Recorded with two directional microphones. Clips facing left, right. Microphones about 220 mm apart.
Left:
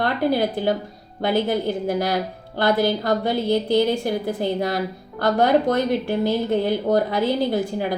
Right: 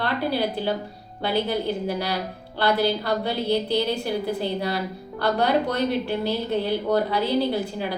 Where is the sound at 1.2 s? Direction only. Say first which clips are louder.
Left 3 dB; 50° left (ahead or behind).